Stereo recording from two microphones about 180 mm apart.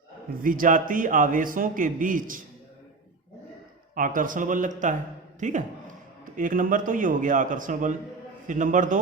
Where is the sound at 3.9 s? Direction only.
50° right (ahead or behind).